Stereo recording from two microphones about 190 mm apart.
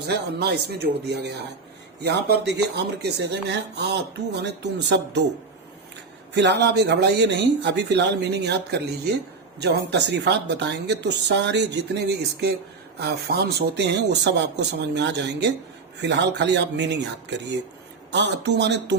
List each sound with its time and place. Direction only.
0.1 s a woman's voice: 60° right (ahead or behind)
6.3 s a woman's voice: 65° right (ahead or behind)